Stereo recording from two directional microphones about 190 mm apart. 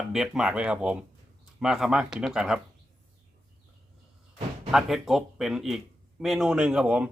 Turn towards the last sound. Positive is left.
turn(degrees=-5)  # may be behind; listen again after turning